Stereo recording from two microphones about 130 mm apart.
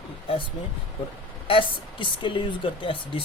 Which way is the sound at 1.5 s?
40° left (ahead or behind).